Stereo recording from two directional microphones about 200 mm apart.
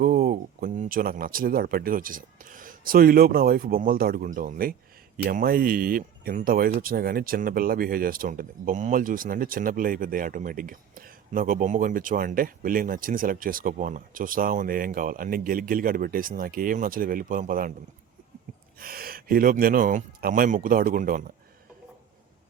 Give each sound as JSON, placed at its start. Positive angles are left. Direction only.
{"t": 0.0, "sound": "speech", "side_deg": -45}
{"t": 18.8, "sound": "speech", "side_deg": -45}